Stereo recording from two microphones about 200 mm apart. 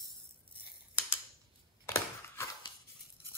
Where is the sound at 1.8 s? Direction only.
15° left (ahead or behind).